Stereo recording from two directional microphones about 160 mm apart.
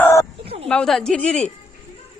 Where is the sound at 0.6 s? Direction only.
5° left (ahead or behind).